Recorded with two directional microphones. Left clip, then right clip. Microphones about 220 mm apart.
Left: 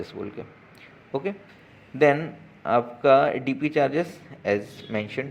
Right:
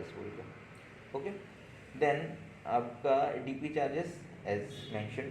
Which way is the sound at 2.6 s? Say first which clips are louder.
Left 12 dB; 50° left (ahead or behind).